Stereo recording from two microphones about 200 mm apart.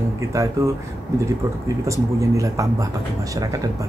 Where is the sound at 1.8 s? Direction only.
15° right (ahead or behind).